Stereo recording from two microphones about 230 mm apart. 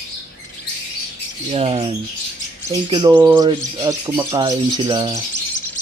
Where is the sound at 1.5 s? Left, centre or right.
Right.